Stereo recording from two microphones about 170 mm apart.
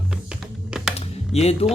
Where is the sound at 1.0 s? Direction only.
40° left (ahead or behind).